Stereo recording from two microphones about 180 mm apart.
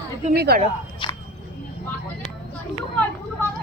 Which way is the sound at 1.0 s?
25° left (ahead or behind).